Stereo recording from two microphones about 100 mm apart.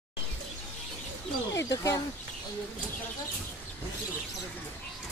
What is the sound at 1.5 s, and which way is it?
Speech, 30° left (ahead or behind).